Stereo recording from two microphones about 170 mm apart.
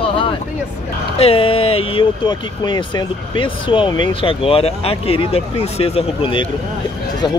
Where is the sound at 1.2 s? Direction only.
35° left (ahead or behind).